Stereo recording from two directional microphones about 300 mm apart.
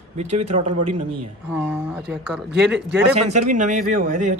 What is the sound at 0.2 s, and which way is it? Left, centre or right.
Speech, right.